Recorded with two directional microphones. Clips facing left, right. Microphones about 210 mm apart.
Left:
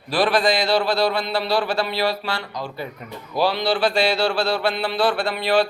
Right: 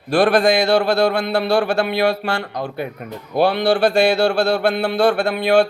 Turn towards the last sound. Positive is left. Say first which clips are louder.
# right 5 dB
turn(degrees=-50)  # may be behind; listen again after turning